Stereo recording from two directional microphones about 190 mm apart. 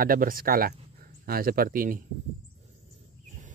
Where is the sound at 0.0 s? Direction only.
50° right (ahead or behind).